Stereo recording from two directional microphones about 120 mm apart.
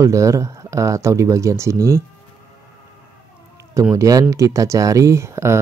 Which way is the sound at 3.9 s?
30° right (ahead or behind).